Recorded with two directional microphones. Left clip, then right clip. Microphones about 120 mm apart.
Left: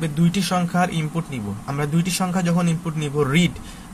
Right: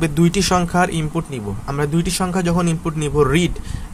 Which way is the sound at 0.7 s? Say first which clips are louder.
Right 4 dB; 35° right (ahead or behind).